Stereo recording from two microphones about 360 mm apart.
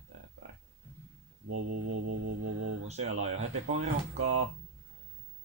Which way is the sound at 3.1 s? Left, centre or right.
Right.